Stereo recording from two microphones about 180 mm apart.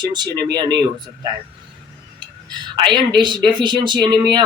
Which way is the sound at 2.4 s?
25° right (ahead or behind).